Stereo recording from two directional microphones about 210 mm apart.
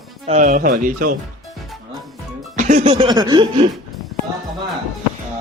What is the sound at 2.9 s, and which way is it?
Speech, 20° right (ahead or behind).